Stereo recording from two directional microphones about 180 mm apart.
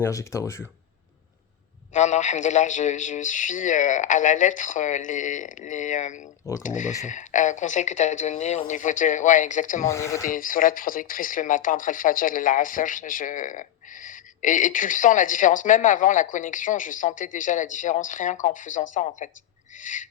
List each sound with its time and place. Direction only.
0.0 s speech: 15° left (ahead or behind)
1.9 s speech: 40° left (ahead or behind)
9.8 s speech: 15° left (ahead or behind)
10.3 s speech: 50° left (ahead or behind)